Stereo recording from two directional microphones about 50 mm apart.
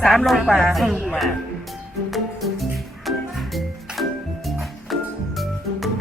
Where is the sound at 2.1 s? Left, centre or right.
Centre.